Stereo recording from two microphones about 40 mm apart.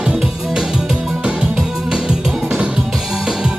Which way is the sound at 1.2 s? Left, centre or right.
Right.